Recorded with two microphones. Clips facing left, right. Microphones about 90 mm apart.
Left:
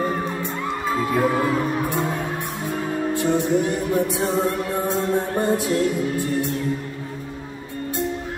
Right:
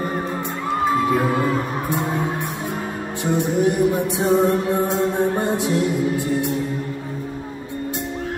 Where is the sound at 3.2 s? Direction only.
20° right (ahead or behind).